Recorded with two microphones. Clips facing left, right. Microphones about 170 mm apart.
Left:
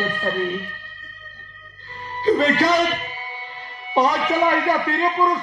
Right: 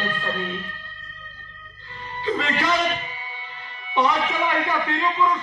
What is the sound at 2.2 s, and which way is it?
Speech, 40° left (ahead or behind).